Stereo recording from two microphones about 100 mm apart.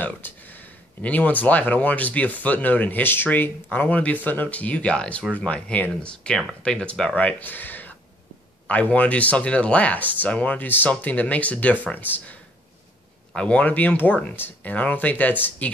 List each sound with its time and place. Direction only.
0.2 s speech: 20° left (ahead or behind)